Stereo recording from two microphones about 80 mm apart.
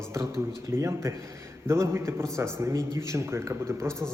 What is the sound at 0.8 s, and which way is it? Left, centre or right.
Speech, right.